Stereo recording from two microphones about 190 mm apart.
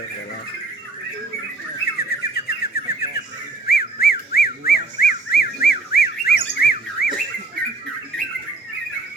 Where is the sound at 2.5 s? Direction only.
55° left (ahead or behind).